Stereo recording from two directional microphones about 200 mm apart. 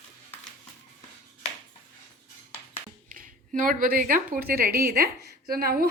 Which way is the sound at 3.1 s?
40° right (ahead or behind).